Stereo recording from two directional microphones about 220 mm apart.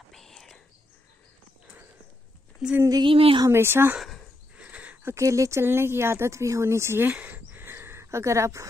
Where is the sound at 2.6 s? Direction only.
10° right (ahead or behind).